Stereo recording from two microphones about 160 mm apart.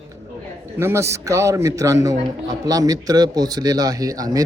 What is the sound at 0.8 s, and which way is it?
A man's voice, 15° right (ahead or behind).